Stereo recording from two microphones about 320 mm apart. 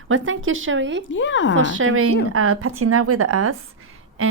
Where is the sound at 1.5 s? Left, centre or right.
Right.